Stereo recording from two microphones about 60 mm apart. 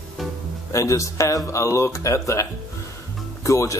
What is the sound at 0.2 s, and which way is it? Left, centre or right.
Music, centre.